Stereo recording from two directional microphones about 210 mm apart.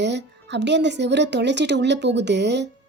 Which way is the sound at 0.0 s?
55° right (ahead or behind).